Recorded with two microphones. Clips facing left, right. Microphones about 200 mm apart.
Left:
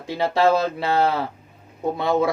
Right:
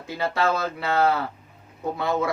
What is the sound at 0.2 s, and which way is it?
Speech, 30° left (ahead or behind).